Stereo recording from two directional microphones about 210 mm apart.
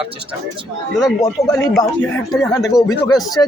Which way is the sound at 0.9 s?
Centre (ahead or behind).